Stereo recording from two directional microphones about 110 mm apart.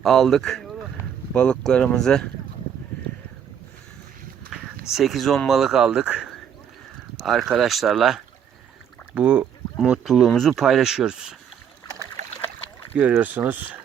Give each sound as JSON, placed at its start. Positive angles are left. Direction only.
{"t": 0.0, "sound": "speech", "side_deg": 0}
{"t": 4.5, "sound": "speech", "side_deg": -5}
{"t": 13.0, "sound": "speech", "side_deg": -15}